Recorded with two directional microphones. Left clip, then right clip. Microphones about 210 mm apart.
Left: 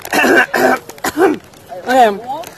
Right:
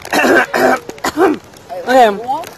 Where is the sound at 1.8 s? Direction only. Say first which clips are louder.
Right 1 dB; centre (ahead or behind).